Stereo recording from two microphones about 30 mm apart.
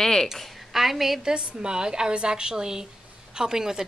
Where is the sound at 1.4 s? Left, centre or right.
Right.